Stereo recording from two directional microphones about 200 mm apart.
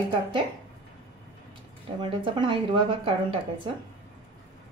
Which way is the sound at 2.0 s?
25° right (ahead or behind).